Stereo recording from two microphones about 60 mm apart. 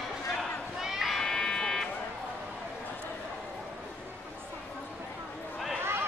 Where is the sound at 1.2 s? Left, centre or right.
Centre.